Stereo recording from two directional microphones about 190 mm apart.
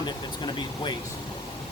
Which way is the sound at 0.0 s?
25° left (ahead or behind).